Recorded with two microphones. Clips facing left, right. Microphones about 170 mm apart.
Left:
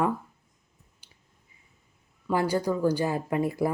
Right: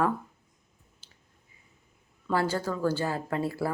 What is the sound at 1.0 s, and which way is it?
Finger snapping, 15° left (ahead or behind).